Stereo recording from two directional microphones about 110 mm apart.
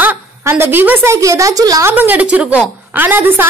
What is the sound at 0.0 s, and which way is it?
A woman's voice, 20° right (ahead or behind).